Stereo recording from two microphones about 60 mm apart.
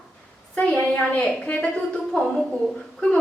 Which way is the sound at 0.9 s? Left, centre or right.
Left.